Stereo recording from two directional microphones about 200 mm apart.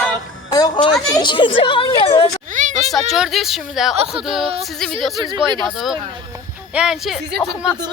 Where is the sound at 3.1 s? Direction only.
Centre (ahead or behind).